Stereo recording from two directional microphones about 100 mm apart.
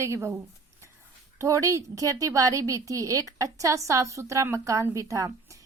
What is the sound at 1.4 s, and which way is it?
A woman's voice, 30° right (ahead or behind).